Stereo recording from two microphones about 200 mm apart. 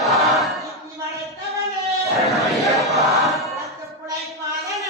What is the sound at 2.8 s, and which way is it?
Crowd, centre (ahead or behind).